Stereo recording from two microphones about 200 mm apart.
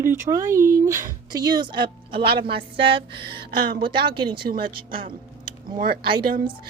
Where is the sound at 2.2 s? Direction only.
50° right (ahead or behind).